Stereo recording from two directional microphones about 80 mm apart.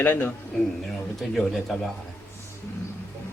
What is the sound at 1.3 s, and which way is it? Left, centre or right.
Speech, centre.